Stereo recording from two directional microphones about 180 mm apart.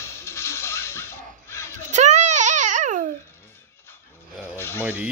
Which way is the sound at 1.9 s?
40° right (ahead or behind).